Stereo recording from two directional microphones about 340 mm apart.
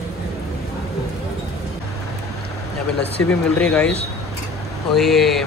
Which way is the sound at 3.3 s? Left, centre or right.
Centre.